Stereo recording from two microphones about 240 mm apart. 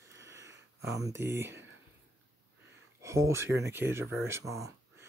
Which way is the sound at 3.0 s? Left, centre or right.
Centre.